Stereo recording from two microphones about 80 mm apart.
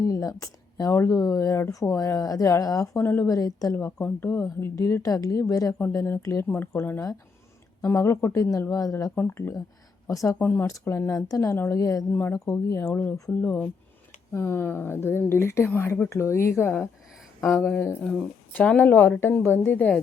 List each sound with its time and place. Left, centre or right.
0.0 s speech: left
3.0 s a woman's voice: left
3.2 s speech: left
3.8 s speech: left
4.4 s speech: left
9.1 s speech: left
10.1 s speech: left
10.3 s a woman's voice: left
10.7 s speech: left
12.9 s a woman's voice: left
14.3 s a woman's voice: left
18.0 s a woman's voice: centre; by 19.9 s left